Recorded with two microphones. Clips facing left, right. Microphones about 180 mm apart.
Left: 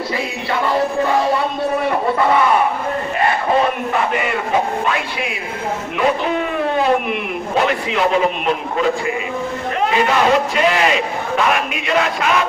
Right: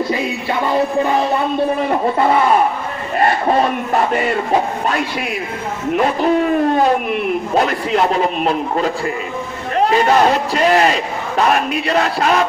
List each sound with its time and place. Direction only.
3.9 s a man's voice: 40° right (ahead or behind)
7.1 s a man's voice: 40° right (ahead or behind)